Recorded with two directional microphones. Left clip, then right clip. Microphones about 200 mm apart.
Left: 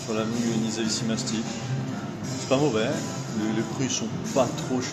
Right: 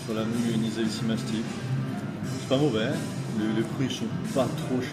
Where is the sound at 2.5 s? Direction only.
5° right (ahead or behind).